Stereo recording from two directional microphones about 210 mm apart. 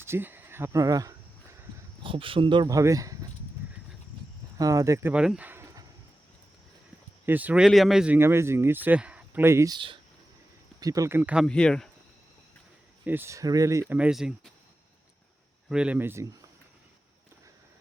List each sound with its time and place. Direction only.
0.0 s speech: 10° right (ahead or behind)
4.5 s speech: 15° right (ahead or behind)
7.3 s speech: 10° right (ahead or behind)
11.4 s speech: 5° left (ahead or behind)
13.1 s speech: 10° right (ahead or behind)
13.9 s speech: 5° right (ahead or behind)
15.7 s speech: 5° right (ahead or behind)